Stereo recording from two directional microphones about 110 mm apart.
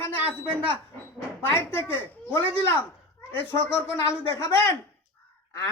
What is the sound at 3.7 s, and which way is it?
Speech, 10° right (ahead or behind).